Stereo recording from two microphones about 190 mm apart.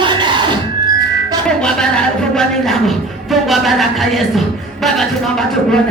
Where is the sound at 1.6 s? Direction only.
5° left (ahead or behind).